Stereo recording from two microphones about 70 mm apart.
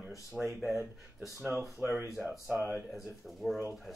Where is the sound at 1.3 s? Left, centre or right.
Right.